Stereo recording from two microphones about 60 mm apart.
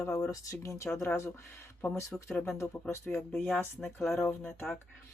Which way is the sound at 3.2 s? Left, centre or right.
Centre.